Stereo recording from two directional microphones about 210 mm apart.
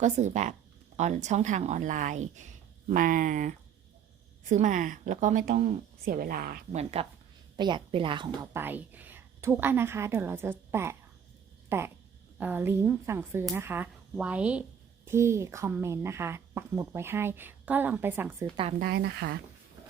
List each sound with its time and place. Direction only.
0.0 s a woman's voice: 35° right (ahead or behind)
6.7 s a woman's voice: 25° right (ahead or behind)
8.5 s a woman's voice: 10° right (ahead or behind)
18.8 s speech: 50° right (ahead or behind)